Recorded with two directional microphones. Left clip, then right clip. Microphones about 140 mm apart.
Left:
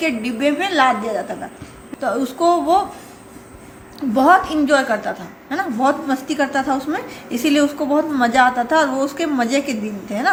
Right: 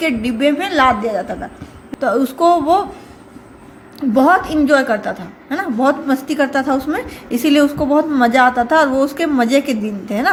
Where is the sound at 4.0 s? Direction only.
35° right (ahead or behind).